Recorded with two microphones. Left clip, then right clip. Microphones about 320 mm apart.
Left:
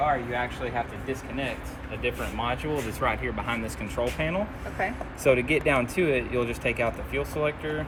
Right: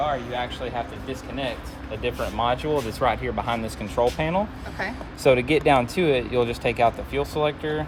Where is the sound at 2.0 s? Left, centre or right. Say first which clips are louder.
Right 5 dB; right.